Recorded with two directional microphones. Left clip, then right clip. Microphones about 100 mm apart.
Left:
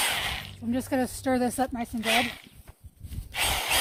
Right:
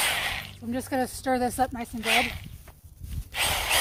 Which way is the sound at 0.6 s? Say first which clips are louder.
Left 1 dB; 85° left.